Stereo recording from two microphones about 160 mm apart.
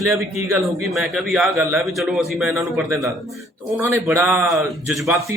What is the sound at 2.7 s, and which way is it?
Speech, 20° right (ahead or behind).